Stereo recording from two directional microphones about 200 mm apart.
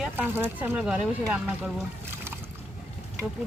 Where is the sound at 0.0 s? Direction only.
10° right (ahead or behind).